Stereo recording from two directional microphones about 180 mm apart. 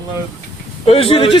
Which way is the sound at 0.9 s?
30° left (ahead or behind).